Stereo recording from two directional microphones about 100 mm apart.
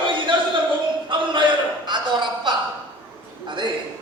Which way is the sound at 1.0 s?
55° right (ahead or behind).